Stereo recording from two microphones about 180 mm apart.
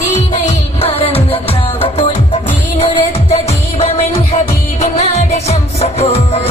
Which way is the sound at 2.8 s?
30° left (ahead or behind).